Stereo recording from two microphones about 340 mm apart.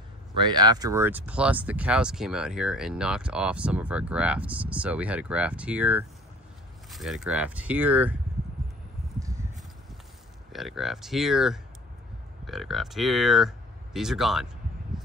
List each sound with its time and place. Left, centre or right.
0.4 s speech: centre
10.5 s speech: centre